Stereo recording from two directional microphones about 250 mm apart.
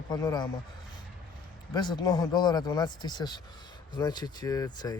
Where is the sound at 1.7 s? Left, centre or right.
Centre.